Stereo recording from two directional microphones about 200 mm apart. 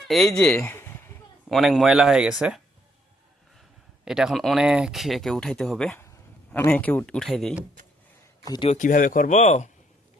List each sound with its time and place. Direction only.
0.1 s speech: centre (ahead or behind)
4.0 s speech: centre (ahead or behind)
8.5 s speech: 25° left (ahead or behind)
8.8 s speech: 40° left (ahead or behind)